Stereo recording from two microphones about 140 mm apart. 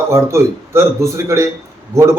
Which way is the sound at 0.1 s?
20° right (ahead or behind).